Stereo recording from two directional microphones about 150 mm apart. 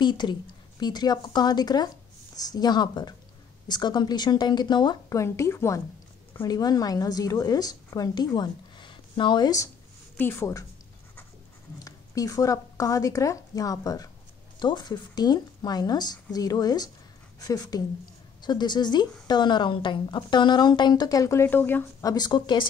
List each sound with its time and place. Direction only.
0.0 s a woman's voice: 30° left (ahead or behind)
5.2 s a woman's voice: 20° left (ahead or behind)
11.8 s a woman's voice: 25° left (ahead or behind)
22.0 s a woman's voice: 25° left (ahead or behind)